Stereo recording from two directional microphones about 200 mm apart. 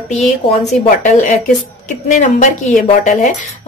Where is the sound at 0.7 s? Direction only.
35° left (ahead or behind).